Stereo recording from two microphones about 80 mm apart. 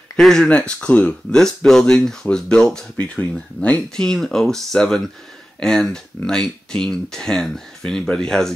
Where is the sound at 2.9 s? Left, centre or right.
Centre.